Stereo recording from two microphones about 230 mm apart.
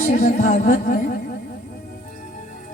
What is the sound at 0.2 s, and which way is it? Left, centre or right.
Music, left.